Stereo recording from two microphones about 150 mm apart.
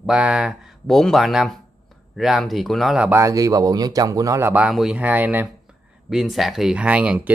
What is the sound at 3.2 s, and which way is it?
Speech, 20° right (ahead or behind).